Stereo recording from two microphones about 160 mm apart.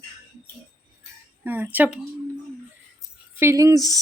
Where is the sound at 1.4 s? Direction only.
15° right (ahead or behind).